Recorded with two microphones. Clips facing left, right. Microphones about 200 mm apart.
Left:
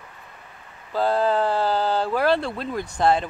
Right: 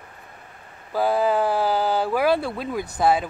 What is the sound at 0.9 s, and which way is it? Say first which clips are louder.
Speech: even; 10° right (ahead or behind).